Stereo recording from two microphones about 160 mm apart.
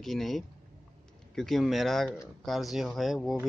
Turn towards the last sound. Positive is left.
turn(degrees=0)  # may be behind; listen again after turning